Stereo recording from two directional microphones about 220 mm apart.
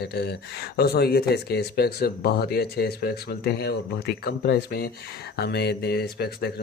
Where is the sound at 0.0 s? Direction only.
45° left (ahead or behind).